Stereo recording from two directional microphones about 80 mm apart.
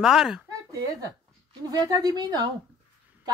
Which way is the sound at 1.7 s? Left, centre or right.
Right.